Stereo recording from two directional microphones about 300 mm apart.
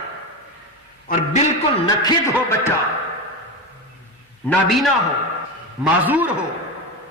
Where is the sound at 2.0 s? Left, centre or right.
Centre.